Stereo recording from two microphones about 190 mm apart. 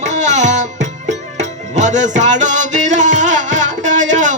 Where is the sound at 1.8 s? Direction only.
40° right (ahead or behind).